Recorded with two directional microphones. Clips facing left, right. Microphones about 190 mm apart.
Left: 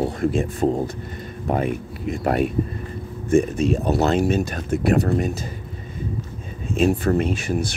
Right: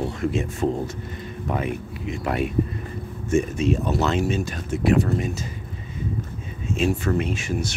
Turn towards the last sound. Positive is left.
turn(degrees=35)  # may be behind; listen again after turning